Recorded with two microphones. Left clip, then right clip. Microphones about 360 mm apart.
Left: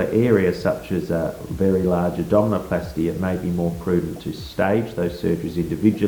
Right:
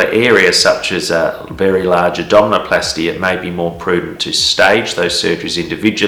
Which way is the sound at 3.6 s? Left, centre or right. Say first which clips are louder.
Right 8 dB; centre.